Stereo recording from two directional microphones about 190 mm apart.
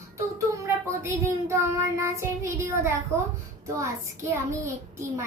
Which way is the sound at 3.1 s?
15° right (ahead or behind).